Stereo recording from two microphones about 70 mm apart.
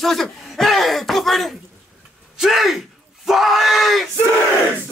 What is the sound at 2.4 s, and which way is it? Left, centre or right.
Speech, centre.